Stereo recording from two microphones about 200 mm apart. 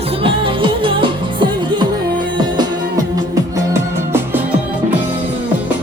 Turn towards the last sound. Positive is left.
turn(degrees=-10)  # may be behind; listen again after turning